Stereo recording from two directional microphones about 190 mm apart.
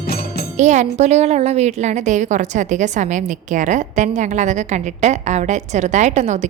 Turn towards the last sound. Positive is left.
turn(degrees=-35)  # may be behind; listen again after turning